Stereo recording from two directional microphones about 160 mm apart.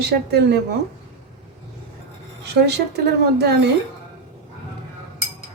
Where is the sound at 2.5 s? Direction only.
90° right.